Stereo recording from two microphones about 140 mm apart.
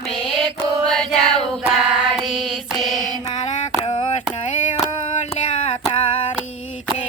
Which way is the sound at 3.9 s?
40° left (ahead or behind).